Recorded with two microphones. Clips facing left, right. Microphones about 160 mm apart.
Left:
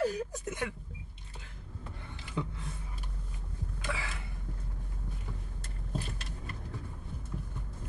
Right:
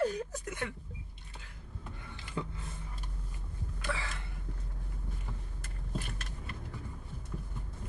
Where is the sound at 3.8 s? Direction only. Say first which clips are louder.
Right 1 dB; 10° left (ahead or behind).